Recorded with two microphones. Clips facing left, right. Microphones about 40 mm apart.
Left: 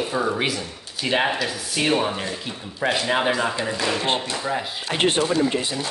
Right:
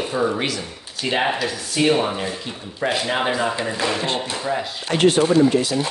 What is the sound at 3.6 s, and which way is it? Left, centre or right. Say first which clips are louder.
Speech: right 2 dB; centre.